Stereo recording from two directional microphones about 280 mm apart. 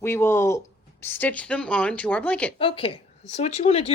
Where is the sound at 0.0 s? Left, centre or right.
Centre.